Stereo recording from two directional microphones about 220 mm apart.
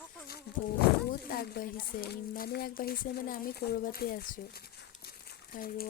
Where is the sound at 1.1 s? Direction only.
40° left (ahead or behind).